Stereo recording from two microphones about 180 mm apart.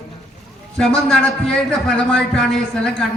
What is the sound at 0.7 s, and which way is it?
A man's voice, 5° left (ahead or behind).